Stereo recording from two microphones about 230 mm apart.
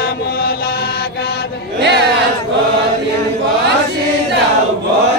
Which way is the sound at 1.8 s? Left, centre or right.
Right.